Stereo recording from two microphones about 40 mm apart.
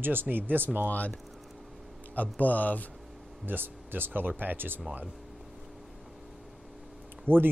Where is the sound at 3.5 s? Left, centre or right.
Right.